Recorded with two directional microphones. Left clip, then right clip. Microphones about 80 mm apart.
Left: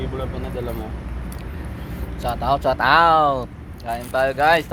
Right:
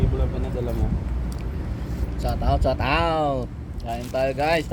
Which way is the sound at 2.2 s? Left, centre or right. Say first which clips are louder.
Left 5 dB; right.